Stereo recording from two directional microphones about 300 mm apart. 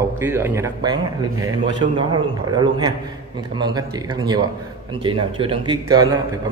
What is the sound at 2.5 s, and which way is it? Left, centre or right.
Speech, centre.